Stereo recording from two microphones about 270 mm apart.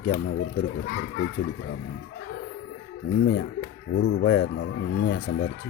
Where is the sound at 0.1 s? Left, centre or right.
Left.